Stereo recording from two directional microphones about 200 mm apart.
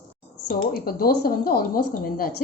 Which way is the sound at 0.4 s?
50° left (ahead or behind).